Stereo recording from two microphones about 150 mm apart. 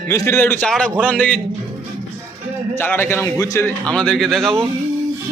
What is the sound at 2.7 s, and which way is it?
A man's voice, 15° left (ahead or behind).